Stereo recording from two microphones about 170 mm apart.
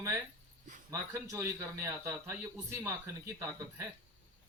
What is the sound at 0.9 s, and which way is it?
A man's voice, 15° right (ahead or behind).